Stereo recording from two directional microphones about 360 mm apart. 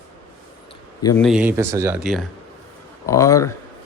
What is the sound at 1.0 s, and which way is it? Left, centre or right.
A man's voice, centre.